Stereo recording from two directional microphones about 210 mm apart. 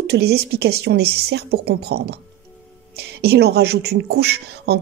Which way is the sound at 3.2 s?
50° right (ahead or behind).